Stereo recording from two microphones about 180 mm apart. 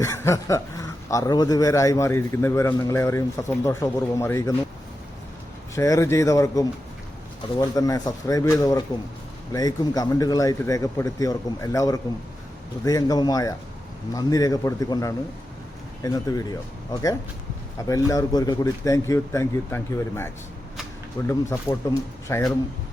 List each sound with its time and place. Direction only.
0.0 s speech: 15° left (ahead or behind)
5.7 s a man's voice: 15° left (ahead or behind)
17.8 s a man's voice: 20° left (ahead or behind)